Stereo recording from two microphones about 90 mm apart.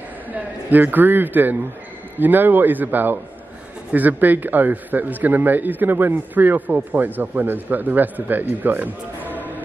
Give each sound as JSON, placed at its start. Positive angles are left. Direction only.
{"t": 0.3, "sound": "a man's voice", "side_deg": -20}